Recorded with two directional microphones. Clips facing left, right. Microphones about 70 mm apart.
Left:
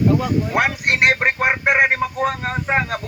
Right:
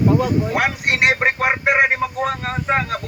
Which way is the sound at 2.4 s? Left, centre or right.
Centre.